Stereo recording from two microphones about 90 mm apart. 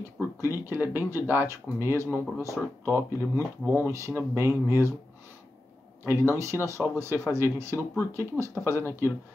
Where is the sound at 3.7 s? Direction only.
30° right (ahead or behind).